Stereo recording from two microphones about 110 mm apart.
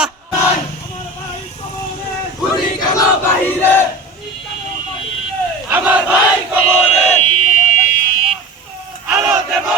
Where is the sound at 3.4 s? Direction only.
20° left (ahead or behind).